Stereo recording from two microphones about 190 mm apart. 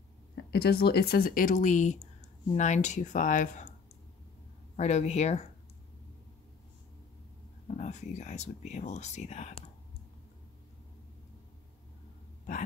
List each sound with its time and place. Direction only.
0.5 s speech: 55° left (ahead or behind)
4.7 s speech: 35° left (ahead or behind)
7.6 s speech: 35° left (ahead or behind)